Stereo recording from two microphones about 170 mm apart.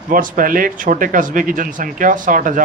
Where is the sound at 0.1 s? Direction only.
55° right (ahead or behind).